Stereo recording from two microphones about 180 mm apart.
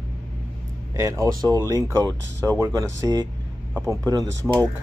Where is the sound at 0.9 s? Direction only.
15° right (ahead or behind).